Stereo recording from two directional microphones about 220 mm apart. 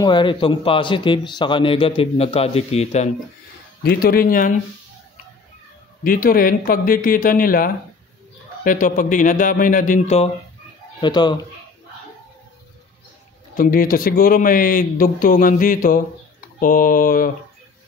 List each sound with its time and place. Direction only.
0.0 s a man's voice: 20° left (ahead or behind)
3.8 s a man's voice: 45° left (ahead or behind)
6.0 s a man's voice: 40° left (ahead or behind)
11.0 s a man's voice: 20° left (ahead or behind)
13.6 s a man's voice: 40° left (ahead or behind)